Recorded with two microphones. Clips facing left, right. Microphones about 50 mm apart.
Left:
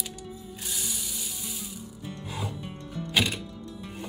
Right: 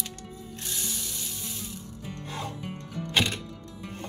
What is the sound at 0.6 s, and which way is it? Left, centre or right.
Ratchet, centre.